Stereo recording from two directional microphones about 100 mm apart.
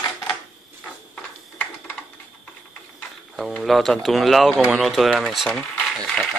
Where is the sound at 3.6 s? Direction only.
Centre (ahead or behind).